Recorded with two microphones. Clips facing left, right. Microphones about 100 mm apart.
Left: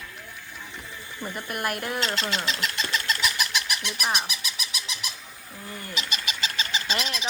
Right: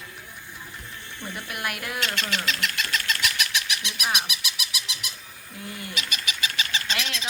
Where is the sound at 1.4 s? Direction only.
40° left (ahead or behind).